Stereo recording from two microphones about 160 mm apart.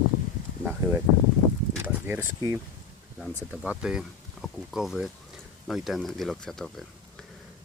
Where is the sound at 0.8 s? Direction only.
20° right (ahead or behind).